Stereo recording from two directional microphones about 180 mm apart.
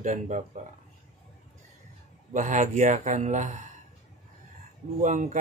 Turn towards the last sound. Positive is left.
turn(degrees=-45)  # may be behind; listen again after turning